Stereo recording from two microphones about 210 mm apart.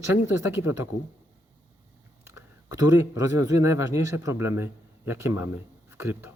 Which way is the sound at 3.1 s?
15° right (ahead or behind).